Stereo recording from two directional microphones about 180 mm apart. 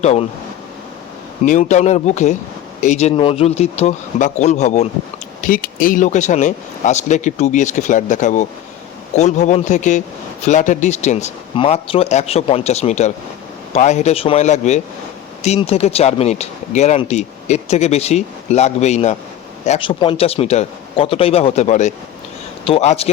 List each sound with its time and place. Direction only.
0.0 s speech: 35° left (ahead or behind)
1.5 s speech: 40° left (ahead or behind)
5.4 s speech: 50° left (ahead or behind)